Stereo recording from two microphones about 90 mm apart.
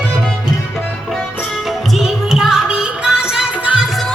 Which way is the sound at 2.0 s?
5° right (ahead or behind).